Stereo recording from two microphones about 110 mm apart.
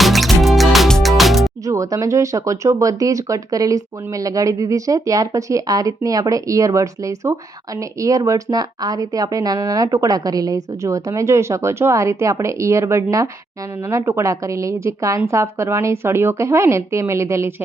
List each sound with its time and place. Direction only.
0.0 s music: centre (ahead or behind)
1.6 s a woman's voice: 30° right (ahead or behind)